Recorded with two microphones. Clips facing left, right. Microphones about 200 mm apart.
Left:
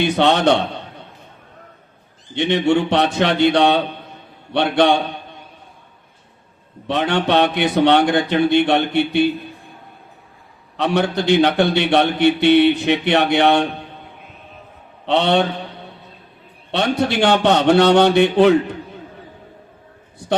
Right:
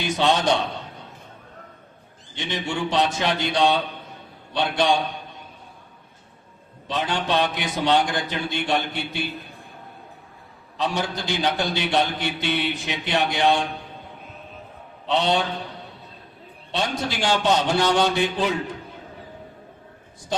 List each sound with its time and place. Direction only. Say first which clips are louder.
0.0 s a man's voice: left 6 dB; 60° left (ahead or behind)
2.3 s a man's voice: left 12 dB; 60° left (ahead or behind)
6.8 s a man's voice: left 7 dB; 65° left (ahead or behind)
10.8 s a man's voice: left 8 dB; 65° left (ahead or behind)
15.0 s a man's voice: left 6 dB; 65° left (ahead or behind)
16.7 s a man's voice: left 8 dB; 60° left (ahead or behind)